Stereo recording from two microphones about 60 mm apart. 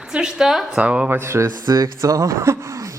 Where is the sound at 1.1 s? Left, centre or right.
Right.